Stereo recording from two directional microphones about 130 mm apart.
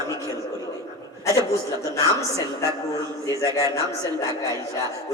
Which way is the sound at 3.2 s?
25° left (ahead or behind).